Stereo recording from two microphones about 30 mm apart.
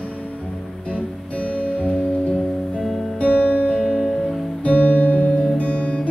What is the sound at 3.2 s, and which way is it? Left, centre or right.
Music, left.